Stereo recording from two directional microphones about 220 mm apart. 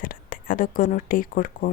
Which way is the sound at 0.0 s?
40° left (ahead or behind).